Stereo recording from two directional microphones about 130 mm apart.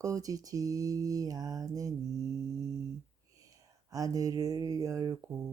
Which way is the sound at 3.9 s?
30° right (ahead or behind).